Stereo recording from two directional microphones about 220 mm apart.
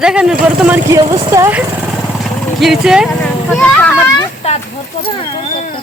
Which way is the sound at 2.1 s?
Centre (ahead or behind).